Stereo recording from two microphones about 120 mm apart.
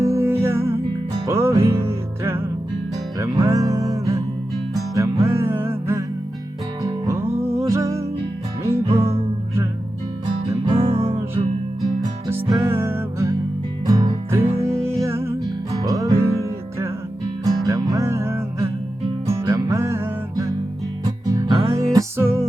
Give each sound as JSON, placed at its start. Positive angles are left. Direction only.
{"t": 0.0, "sound": "music", "side_deg": -25}
{"t": 7.3, "sound": "music", "side_deg": -55}
{"t": 7.7, "sound": "music", "side_deg": -25}
{"t": 8.8, "sound": "music", "side_deg": -50}
{"t": 10.7, "sound": "music", "side_deg": -55}
{"t": 12.3, "sound": "music", "side_deg": -25}
{"t": 13.8, "sound": "music", "side_deg": -30}
{"t": 14.3, "sound": "music", "side_deg": -20}
{"t": 14.7, "sound": "music", "side_deg": 5}
{"t": 15.0, "sound": "music", "side_deg": -20}
{"t": 19.5, "sound": "music", "side_deg": -30}
{"t": 21.2, "sound": "music", "side_deg": -35}
{"t": 21.5, "sound": "music", "side_deg": -50}
{"t": 21.9, "sound": "music", "side_deg": -25}